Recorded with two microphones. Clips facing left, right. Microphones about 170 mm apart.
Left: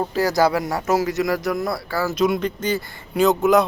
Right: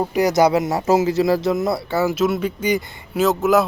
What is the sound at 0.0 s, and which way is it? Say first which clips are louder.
Speech: right 3 dB; 15° right (ahead or behind).